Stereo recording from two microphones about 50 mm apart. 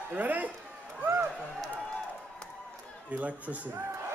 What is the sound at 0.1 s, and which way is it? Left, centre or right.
Speech, right.